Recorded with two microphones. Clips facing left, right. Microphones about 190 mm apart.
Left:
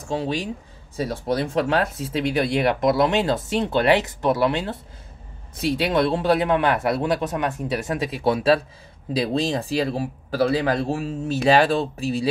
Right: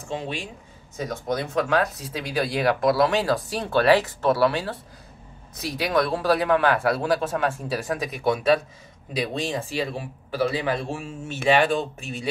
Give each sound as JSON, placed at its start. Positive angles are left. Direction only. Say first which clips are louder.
{"t": 0.0, "sound": "speech", "louder": "left 5 dB", "side_deg": 35}